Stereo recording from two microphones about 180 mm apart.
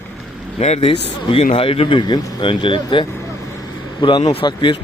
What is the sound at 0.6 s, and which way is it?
A man's voice, 35° left (ahead or behind).